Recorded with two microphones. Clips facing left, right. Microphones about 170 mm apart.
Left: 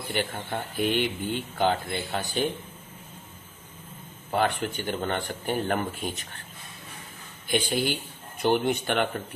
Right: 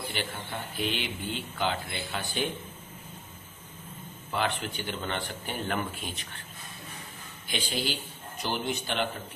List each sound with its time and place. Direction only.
0.1 s speech: 45° left (ahead or behind)
4.3 s speech: 45° left (ahead or behind)
7.4 s speech: 50° left (ahead or behind)